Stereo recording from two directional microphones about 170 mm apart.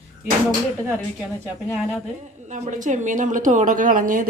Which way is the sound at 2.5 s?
45° right (ahead or behind).